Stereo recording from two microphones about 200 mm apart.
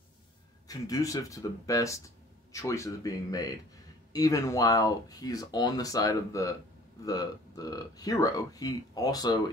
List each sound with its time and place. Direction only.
0.7 s speech: 15° left (ahead or behind)